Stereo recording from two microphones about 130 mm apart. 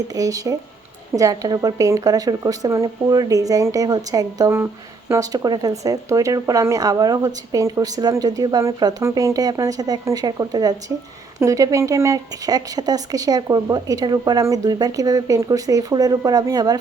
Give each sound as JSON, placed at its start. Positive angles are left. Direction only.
{"t": 0.1, "sound": "a woman's voice", "side_deg": -25}